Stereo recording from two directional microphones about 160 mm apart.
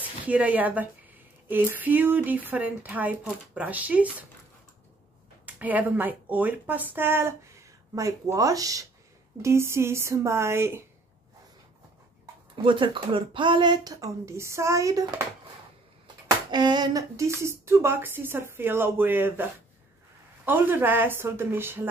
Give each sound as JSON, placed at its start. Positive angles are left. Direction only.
{"t": 0.3, "sound": "speech", "side_deg": -10}
{"t": 5.4, "sound": "speech", "side_deg": -10}
{"t": 12.6, "sound": "speech", "side_deg": -30}
{"t": 16.4, "sound": "speech", "side_deg": -25}